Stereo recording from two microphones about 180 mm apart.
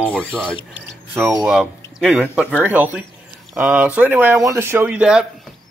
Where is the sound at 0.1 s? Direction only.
5° left (ahead or behind).